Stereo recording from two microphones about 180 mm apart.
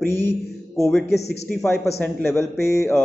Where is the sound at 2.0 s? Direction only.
10° left (ahead or behind).